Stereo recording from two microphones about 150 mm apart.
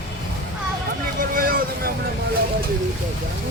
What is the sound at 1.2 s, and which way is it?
Vehicle, 70° right (ahead or behind).